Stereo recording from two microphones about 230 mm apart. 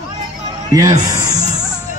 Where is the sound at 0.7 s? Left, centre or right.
Centre.